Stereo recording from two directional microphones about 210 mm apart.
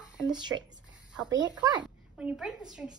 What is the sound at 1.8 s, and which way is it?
A woman's voice, 5° right (ahead or behind).